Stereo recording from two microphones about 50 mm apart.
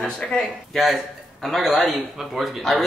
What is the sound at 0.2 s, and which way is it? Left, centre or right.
Speech, centre.